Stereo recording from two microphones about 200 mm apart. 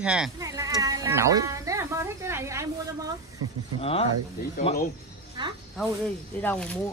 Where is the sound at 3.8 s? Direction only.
30° left (ahead or behind).